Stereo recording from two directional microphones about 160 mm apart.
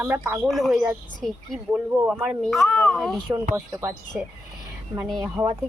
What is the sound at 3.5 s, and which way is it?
Speech, 20° right (ahead or behind).